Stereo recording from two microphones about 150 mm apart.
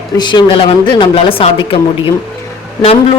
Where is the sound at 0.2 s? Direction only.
30° left (ahead or behind).